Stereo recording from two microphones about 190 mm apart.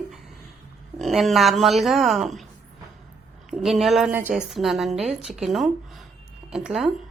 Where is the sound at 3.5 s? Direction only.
Centre (ahead or behind).